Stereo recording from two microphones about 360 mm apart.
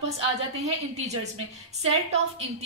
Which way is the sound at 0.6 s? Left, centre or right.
Centre.